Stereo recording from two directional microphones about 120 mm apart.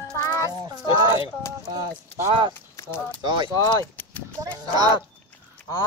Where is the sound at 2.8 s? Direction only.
25° left (ahead or behind).